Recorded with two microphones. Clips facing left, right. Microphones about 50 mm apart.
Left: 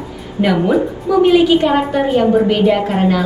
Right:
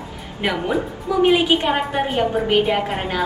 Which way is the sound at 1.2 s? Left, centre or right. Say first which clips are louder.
Left 5 dB; right.